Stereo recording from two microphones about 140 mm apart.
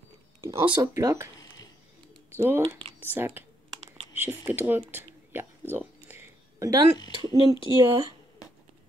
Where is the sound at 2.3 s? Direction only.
15° right (ahead or behind).